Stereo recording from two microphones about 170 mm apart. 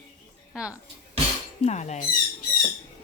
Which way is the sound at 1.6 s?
45° left (ahead or behind).